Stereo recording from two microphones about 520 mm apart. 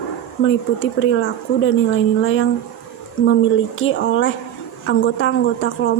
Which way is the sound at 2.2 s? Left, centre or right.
Left.